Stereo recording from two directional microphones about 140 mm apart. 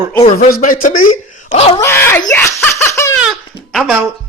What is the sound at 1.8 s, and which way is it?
Speech, 15° left (ahead or behind).